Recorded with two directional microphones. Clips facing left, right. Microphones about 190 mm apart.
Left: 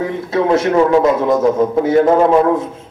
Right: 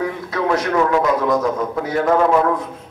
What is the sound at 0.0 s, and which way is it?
A man's voice, 25° left (ahead or behind).